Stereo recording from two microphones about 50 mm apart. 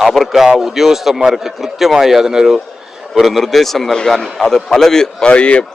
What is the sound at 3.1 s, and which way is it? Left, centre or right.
A man's voice, centre.